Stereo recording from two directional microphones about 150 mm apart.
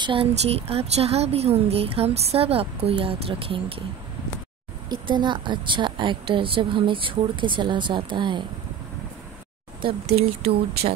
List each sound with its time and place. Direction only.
0.0 s speech: 35° right (ahead or behind)
4.8 s speech: 30° right (ahead or behind)
9.8 s speech: 40° right (ahead or behind)